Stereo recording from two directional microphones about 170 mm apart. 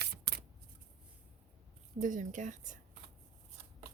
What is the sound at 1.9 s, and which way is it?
Speech, 50° right (ahead or behind).